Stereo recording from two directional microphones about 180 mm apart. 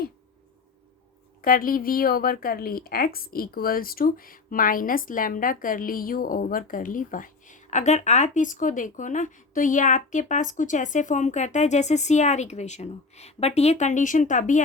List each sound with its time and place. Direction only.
1.4 s a woman's voice: 50° left (ahead or behind)